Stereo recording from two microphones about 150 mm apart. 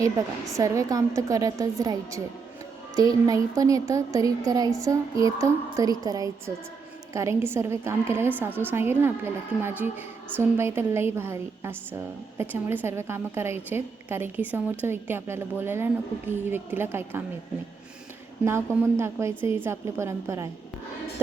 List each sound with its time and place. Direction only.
0.5 s a woman's voice: 20° right (ahead or behind)
18.4 s a woman's voice: 15° right (ahead or behind)